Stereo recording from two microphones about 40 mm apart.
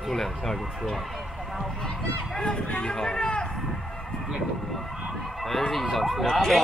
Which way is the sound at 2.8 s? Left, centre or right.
Centre.